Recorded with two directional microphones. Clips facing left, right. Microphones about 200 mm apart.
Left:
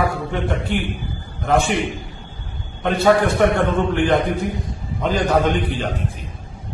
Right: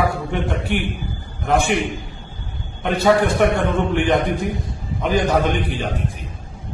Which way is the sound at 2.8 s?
15° right (ahead or behind).